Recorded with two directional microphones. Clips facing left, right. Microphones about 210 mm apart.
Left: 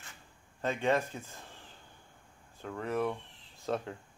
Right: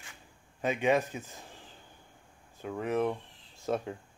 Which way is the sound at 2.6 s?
15° right (ahead or behind).